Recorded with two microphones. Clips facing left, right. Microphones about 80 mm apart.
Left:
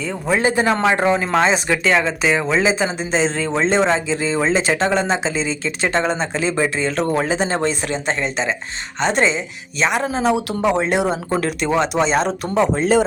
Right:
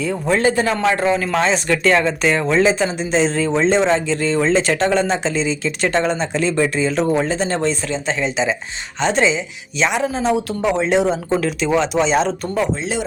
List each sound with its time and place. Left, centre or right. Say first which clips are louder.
0.3 s a man's voice: even; centre
7.3 s speech: even; centre
8.2 s speech: right 2 dB; centre
10.7 s speech: right 1 dB; centre
12.2 s speech: left 1 dB; left